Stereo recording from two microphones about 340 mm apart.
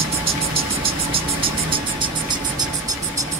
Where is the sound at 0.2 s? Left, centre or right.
Centre.